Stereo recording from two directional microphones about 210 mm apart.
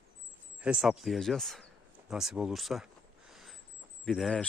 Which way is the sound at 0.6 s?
5° right (ahead or behind).